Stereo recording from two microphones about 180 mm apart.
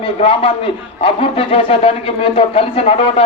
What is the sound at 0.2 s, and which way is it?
Speech, 30° left (ahead or behind).